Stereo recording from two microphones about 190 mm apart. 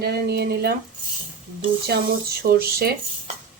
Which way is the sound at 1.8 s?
55° right (ahead or behind).